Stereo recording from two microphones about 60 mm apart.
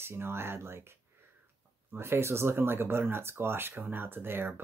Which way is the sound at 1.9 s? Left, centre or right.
Right.